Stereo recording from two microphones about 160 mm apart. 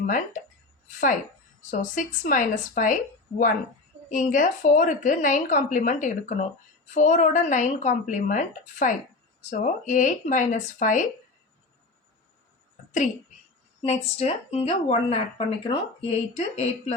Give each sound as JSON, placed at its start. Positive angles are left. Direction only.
{"t": 0.9, "sound": "a woman's voice", "side_deg": 50}
{"t": 13.8, "sound": "speech", "side_deg": 40}